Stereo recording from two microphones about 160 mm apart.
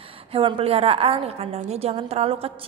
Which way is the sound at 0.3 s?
35° right (ahead or behind).